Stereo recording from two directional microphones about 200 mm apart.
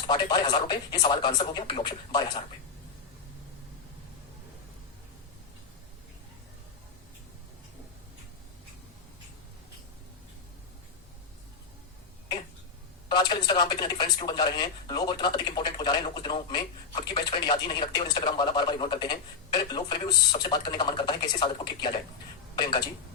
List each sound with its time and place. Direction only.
0.1 s speech: 20° left (ahead or behind)
13.1 s speech: 20° left (ahead or behind)